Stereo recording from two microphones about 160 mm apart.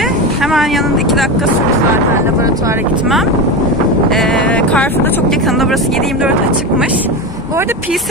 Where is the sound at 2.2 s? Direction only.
20° right (ahead or behind).